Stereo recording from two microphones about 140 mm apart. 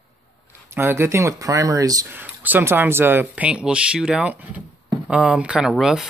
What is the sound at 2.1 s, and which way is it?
Speech, 10° right (ahead or behind).